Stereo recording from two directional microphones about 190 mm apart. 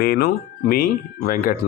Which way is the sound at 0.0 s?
55° left (ahead or behind).